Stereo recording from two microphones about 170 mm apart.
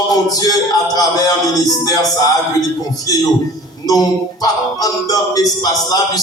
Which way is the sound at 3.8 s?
20° left (ahead or behind).